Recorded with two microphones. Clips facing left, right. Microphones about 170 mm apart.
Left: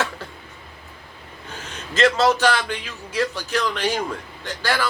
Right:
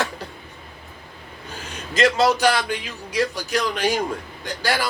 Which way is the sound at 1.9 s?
10° right (ahead or behind).